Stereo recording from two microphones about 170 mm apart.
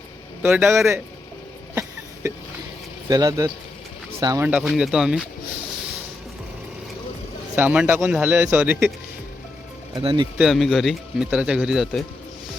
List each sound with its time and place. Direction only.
0.4 s speech: 5° right (ahead or behind)
3.1 s speech: 20° right (ahead or behind)
4.4 s speech: 5° right (ahead or behind)
7.5 s speech: 10° right (ahead or behind)
9.9 s speech: 25° right (ahead or behind)
10.3 s speech: centre (ahead or behind)